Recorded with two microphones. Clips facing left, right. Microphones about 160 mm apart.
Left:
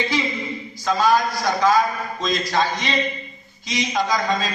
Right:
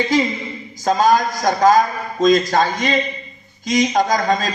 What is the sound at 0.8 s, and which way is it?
A man's voice, 45° right (ahead or behind).